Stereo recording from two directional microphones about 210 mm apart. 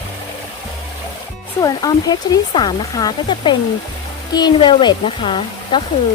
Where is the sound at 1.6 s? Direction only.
20° left (ahead or behind).